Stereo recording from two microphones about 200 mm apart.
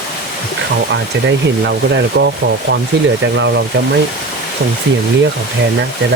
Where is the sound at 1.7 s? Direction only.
60° right (ahead or behind).